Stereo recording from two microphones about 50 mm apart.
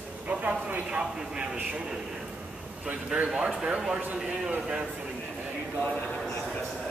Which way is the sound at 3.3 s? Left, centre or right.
Centre.